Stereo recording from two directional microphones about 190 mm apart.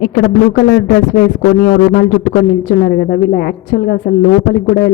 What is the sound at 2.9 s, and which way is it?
A woman's voice, 65° left (ahead or behind).